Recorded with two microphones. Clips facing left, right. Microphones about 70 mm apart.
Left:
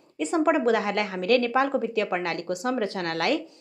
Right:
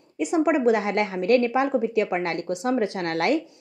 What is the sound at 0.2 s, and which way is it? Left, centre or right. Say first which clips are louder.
A woman's voice: right 2 dB; centre.